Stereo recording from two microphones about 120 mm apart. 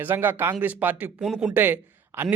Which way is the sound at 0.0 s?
15° right (ahead or behind).